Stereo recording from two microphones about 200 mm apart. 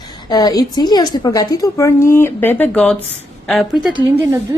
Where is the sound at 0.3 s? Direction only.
20° left (ahead or behind); by 3.7 s centre (ahead or behind).